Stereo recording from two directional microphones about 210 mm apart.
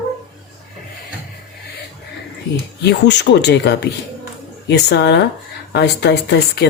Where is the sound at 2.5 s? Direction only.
55° left (ahead or behind).